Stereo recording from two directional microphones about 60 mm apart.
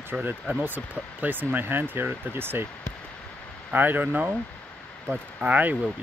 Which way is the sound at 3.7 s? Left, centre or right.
Right.